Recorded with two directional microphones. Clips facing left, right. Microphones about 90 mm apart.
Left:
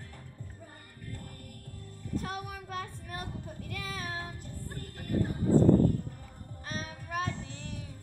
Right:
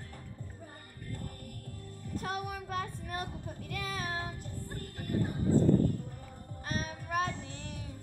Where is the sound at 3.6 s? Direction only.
35° right (ahead or behind).